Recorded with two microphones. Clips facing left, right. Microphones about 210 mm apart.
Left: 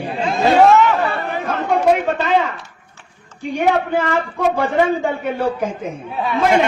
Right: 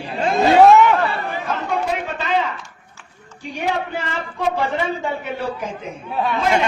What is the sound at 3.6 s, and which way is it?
A man's voice, 50° left (ahead or behind).